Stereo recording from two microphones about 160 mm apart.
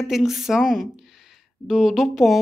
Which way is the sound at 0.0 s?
Centre (ahead or behind).